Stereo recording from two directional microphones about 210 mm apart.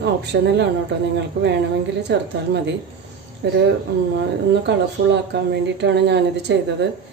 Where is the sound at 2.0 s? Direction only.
55° right (ahead or behind).